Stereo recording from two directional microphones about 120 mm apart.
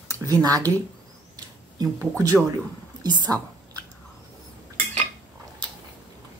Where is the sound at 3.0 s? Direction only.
35° right (ahead or behind).